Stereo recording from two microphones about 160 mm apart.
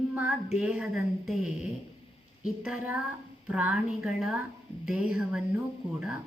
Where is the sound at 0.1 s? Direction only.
5° right (ahead or behind).